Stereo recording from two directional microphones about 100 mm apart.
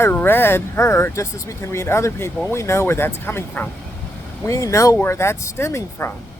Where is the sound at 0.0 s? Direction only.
20° left (ahead or behind).